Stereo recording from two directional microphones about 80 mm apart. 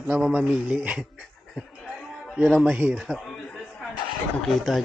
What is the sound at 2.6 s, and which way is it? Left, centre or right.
Speech, centre.